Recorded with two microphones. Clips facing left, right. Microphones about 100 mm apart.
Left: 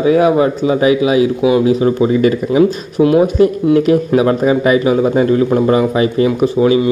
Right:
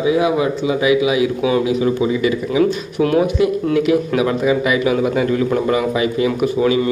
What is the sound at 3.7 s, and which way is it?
A man's voice, 40° left (ahead or behind).